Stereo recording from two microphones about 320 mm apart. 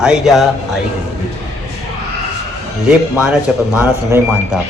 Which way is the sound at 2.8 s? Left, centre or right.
Centre.